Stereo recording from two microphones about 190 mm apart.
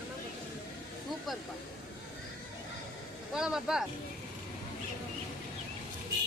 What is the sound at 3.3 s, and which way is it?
Speech, 5° right (ahead or behind).